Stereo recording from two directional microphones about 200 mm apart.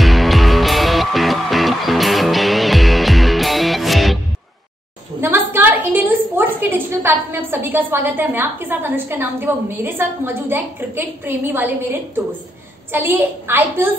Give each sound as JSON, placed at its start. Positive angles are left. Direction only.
{"t": 0.0, "sound": "music", "side_deg": 0}
{"t": 5.2, "sound": "a woman's voice", "side_deg": -10}